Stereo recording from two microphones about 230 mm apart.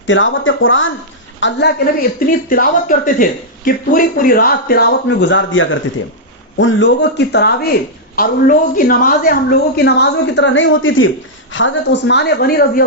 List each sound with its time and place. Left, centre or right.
0.1 s a woman's voice: left
8.1 s a woman's voice: left